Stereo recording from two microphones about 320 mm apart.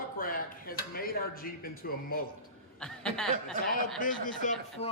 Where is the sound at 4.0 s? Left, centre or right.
Left.